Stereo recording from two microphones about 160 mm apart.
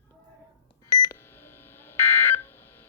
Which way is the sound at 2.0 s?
15° left (ahead or behind).